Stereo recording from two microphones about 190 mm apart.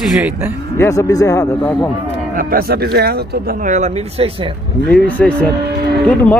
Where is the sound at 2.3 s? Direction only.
50° right (ahead or behind); by 4.6 s 30° right (ahead or behind).